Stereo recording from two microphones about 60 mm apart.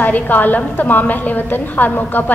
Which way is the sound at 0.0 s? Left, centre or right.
Left.